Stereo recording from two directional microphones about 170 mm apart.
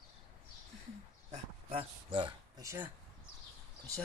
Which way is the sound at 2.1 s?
25° right (ahead or behind).